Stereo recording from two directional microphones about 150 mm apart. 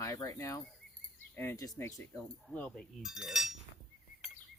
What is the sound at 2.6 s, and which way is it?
Speech, 5° left (ahead or behind).